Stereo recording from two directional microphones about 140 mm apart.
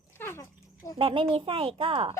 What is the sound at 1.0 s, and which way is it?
A woman's voice, 40° right (ahead or behind).